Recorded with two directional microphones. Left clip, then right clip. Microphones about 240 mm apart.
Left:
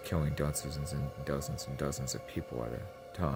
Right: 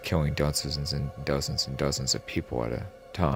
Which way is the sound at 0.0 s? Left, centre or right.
Right.